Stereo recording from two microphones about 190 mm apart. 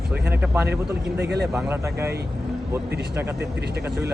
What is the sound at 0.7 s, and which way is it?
Speech, 60° right (ahead or behind).